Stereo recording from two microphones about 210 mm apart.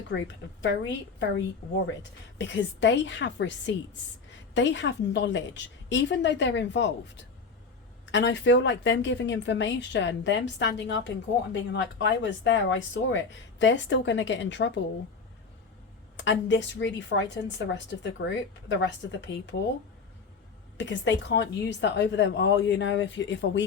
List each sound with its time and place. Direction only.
0.1 s a woman's voice: 60° left (ahead or behind)
16.1 s a woman's voice: 60° left (ahead or behind)
20.7 s a woman's voice: 60° left (ahead or behind)